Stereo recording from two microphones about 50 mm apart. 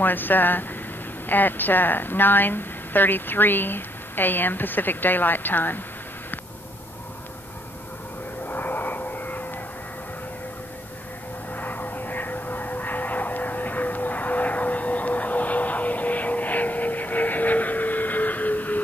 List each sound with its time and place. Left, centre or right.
0.0 s a woman's voice: left
8.5 s aircraft: left
11.5 s aircraft: left